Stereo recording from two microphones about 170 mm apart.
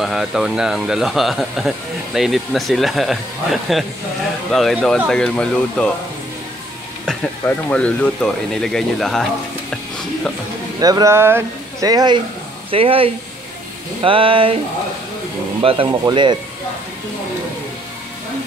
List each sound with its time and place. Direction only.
0.0 s speech: centre (ahead or behind)
7.1 s speech: 5° left (ahead or behind)
10.8 s speech: 20° right (ahead or behind)
12.7 s speech: 35° right (ahead or behind)
15.6 s speech: 30° right (ahead or behind)